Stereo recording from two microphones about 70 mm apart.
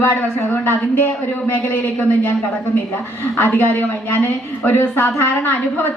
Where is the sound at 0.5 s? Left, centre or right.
Left.